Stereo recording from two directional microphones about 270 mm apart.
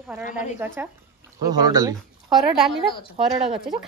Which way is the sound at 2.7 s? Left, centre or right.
Centre.